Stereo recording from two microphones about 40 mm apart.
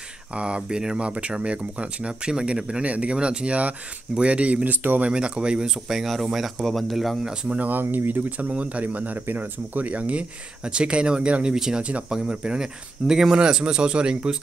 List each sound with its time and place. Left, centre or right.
0.3 s speech: right
2.8 s speech: right
5.9 s speech: centre
7.5 s speech: right
10.6 s speech: right
11.5 s speech: centre